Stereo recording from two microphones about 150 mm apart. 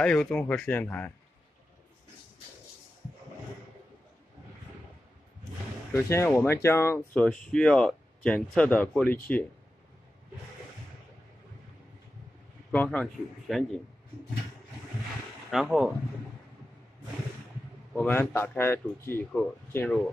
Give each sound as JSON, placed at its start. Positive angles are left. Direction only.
{"t": 0.0, "sound": "speech", "side_deg": 5}
{"t": 5.9, "sound": "speech", "side_deg": 15}
{"t": 7.2, "sound": "speech", "side_deg": 5}
{"t": 12.7, "sound": "speech", "side_deg": 10}
{"t": 15.5, "sound": "speech", "side_deg": -5}
{"t": 17.9, "sound": "speech", "side_deg": 10}